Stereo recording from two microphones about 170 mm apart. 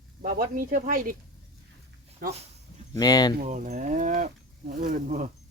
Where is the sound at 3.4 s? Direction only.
45° right (ahead or behind).